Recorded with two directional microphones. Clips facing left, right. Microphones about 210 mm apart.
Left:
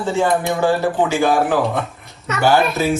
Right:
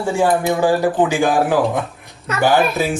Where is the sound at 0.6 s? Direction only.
15° right (ahead or behind).